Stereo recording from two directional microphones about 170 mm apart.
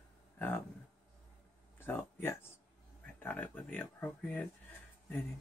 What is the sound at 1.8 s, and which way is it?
Speech, 10° left (ahead or behind).